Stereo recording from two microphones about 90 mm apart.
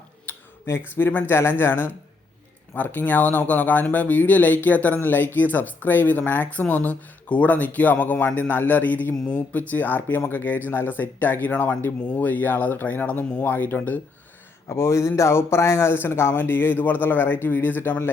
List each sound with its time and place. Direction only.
0.3 s a sound: 30° left (ahead or behind)
0.9 s speech: 25° left (ahead or behind)
14.7 s speech: 30° left (ahead or behind)